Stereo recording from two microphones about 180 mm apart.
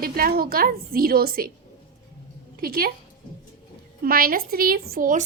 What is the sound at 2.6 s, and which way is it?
Speech, 55° right (ahead or behind).